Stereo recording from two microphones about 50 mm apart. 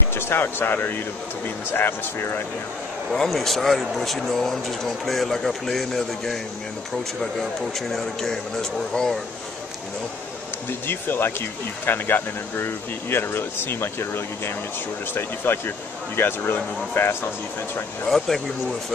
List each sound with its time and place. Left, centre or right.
0.1 s speech: left
3.1 s speech: centre
7.9 s speech: centre
10.9 s speech: left